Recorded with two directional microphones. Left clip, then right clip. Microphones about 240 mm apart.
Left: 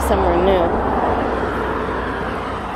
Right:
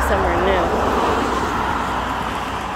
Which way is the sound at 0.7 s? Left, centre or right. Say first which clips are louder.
Even; right.